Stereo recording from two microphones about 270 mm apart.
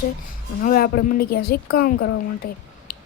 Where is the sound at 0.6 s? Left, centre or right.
Left.